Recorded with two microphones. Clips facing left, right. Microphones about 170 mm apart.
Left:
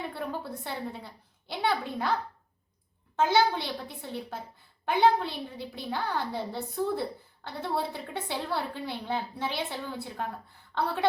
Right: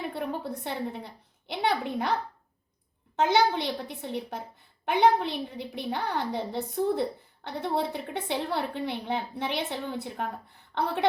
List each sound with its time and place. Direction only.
0.1 s a woman's voice: 20° right (ahead or behind)
3.2 s a woman's voice: 20° right (ahead or behind)